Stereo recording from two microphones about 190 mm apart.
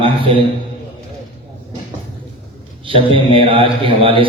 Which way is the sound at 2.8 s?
30° right (ahead or behind).